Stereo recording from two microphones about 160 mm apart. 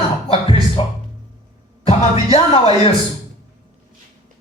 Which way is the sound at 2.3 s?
40° left (ahead or behind).